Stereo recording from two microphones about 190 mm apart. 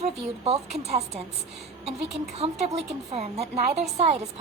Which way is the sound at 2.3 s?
35° right (ahead or behind).